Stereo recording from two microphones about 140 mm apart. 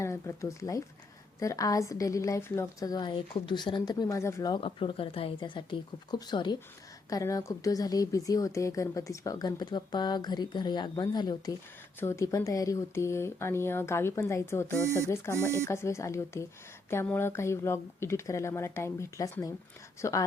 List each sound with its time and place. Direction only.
0.0 s speech: 20° left (ahead or behind)
4.6 s speech: 40° left (ahead or behind)
11.9 s speech: 20° left (ahead or behind)